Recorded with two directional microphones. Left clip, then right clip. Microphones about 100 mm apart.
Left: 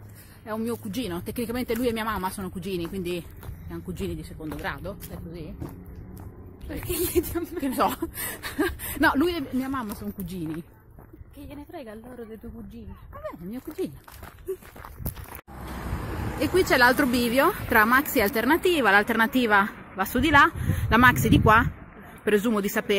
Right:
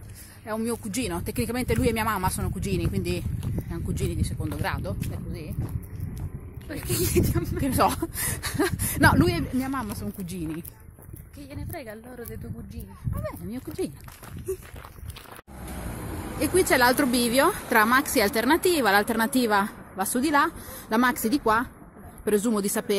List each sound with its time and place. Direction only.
0.5 s speech: 20° right (ahead or behind)
3.7 s speech: 25° right (ahead or behind)
6.7 s speech: 15° left (ahead or behind)
7.2 s speech: 30° left (ahead or behind)
7.6 s speech: 30° right (ahead or behind)
11.5 s a woman's voice: 20° left (ahead or behind)
13.2 s speech: 25° right (ahead or behind)
16.3 s a woman's voice: 10° right (ahead or behind)
20.2 s a woman's voice: centre (ahead or behind)
21.1 s speech: 15° left (ahead or behind)
22.5 s speech: 20° right (ahead or behind)